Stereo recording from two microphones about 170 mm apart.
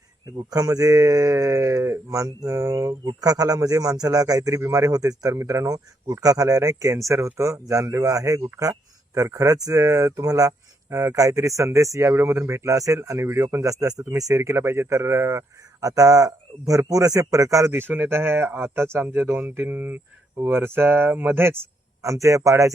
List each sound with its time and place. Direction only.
0.3 s speech: 20° right (ahead or behind)